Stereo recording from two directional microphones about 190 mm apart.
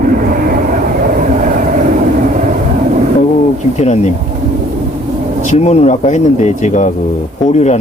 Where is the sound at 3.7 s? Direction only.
35° left (ahead or behind).